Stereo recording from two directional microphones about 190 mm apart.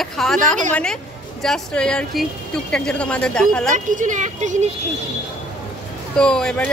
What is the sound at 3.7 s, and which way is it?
Speech, 40° right (ahead or behind).